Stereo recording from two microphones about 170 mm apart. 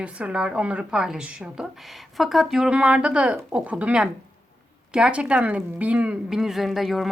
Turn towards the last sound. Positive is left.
turn(degrees=0)  # may be behind; listen again after turning